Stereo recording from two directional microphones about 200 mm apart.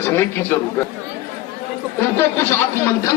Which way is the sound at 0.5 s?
10° left (ahead or behind).